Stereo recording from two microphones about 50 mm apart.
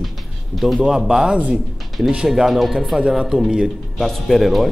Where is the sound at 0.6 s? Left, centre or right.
Centre.